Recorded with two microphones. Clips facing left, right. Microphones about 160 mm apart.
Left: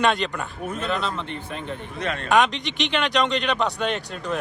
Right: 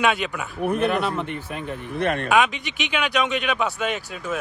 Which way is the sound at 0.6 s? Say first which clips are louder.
Right 6 dB; 60° right (ahead or behind).